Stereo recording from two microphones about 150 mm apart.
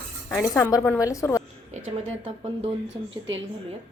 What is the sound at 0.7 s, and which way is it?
Speech, 20° left (ahead or behind).